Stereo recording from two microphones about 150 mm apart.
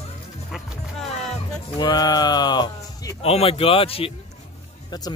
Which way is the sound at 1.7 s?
25° left (ahead or behind).